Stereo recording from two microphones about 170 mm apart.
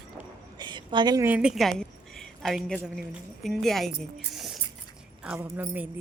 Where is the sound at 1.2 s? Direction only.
5° right (ahead or behind).